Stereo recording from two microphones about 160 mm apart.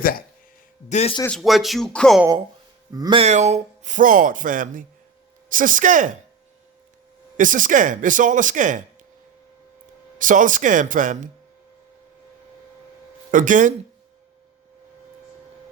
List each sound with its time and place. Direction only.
0.0 s speech: 65° left (ahead or behind)
0.9 s speech: 45° left (ahead or behind)
1.3 s speech: centre (ahead or behind)
2.9 s speech: 25° right (ahead or behind)
3.2 s speech: 45° right (ahead or behind)
7.3 s speech: 55° right (ahead or behind)
10.2 s speech: 55° right (ahead or behind)
13.3 s speech: 55° right (ahead or behind)